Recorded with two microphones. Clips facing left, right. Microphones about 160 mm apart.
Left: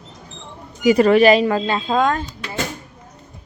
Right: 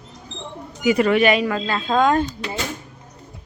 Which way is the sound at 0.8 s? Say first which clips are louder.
Left 4 dB; 35° left (ahead or behind).